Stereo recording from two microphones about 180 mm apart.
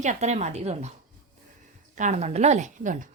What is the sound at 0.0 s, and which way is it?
Speech, 40° right (ahead or behind).